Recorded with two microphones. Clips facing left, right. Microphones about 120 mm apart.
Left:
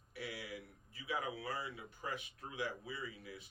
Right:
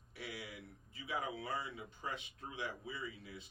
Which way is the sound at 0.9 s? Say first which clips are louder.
Even; 25° right (ahead or behind).